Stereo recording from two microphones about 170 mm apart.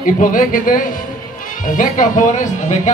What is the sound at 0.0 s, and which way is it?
Speech, 50° left (ahead or behind).